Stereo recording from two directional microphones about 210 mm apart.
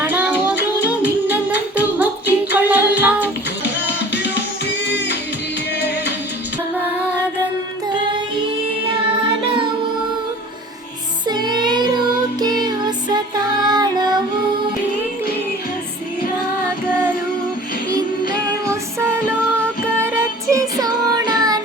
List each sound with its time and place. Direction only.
0.0 s music: 10° right (ahead or behind)
3.6 s music: 55° left (ahead or behind)
11.3 s child singing: 20° right (ahead or behind)
18.7 s music: 15° right (ahead or behind)